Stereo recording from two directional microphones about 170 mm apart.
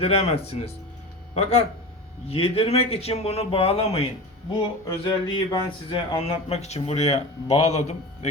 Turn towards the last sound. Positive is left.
turn(degrees=40)  # may be behind; listen again after turning